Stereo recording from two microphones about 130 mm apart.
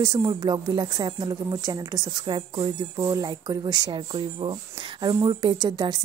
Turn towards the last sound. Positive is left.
turn(degrees=-30)  # may be behind; listen again after turning